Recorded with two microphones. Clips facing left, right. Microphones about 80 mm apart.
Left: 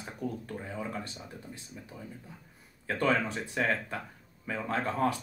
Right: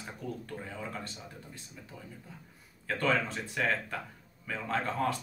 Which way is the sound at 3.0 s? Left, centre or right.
Centre.